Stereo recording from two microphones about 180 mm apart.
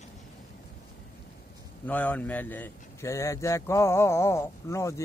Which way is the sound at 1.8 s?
10° left (ahead or behind).